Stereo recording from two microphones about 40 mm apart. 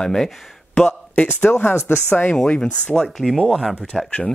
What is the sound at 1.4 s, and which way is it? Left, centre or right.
Speech, left.